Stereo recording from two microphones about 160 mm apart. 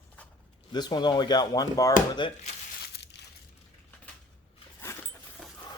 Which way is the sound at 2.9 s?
90° left.